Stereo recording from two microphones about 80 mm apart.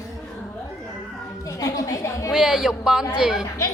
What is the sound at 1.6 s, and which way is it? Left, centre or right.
Speech, left.